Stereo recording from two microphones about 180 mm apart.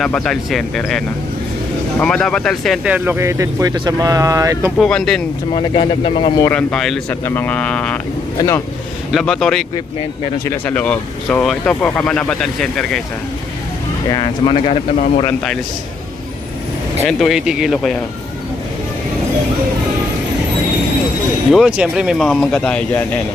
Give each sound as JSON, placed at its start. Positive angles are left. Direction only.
{"t": 0.0, "sound": "speech", "side_deg": 5}
{"t": 4.8, "sound": "speech", "side_deg": 5}
{"t": 5.5, "sound": "speech", "side_deg": 30}
{"t": 6.4, "sound": "speech", "side_deg": 10}
{"t": 7.1, "sound": "speech", "side_deg": 10}
{"t": 8.4, "sound": "speech", "side_deg": 15}
{"t": 9.1, "sound": "speech", "side_deg": 0}
{"t": 10.4, "sound": "speech", "side_deg": 15}
{"t": 14.1, "sound": "speech", "side_deg": 25}
{"t": 17.1, "sound": "speech", "side_deg": 0}
{"t": 21.5, "sound": "speech", "side_deg": -5}